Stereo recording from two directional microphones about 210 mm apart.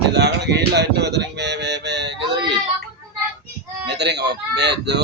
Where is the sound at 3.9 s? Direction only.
55° right (ahead or behind).